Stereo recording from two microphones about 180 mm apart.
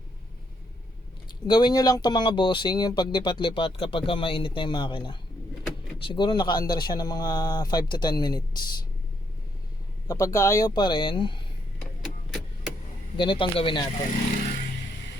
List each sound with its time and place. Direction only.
1.5 s speech: 25° left (ahead or behind)
10.1 s speech: 15° left (ahead or behind)
11.8 s vehicle: centre (ahead or behind)
13.1 s speech: 25° left (ahead or behind)